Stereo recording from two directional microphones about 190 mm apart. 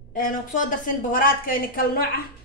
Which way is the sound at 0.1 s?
45° left (ahead or behind).